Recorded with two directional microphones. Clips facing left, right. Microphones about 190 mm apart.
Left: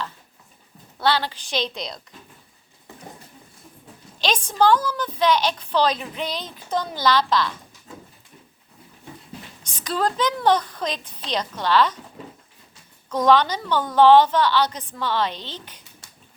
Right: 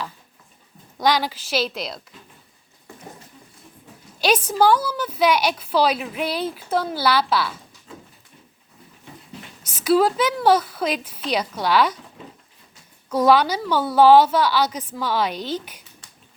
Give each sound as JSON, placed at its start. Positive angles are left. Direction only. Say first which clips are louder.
{"t": 0.9, "sound": "a woman's voice", "louder": "right 2 dB", "side_deg": -15}
{"t": 4.2, "sound": "a woman's voice", "louder": "right 2 dB", "side_deg": -10}
{"t": 9.6, "sound": "a woman's voice", "louder": "right 7 dB", "side_deg": -5}
{"t": 13.1, "sound": "a woman's voice", "louder": "right 1 dB", "side_deg": -10}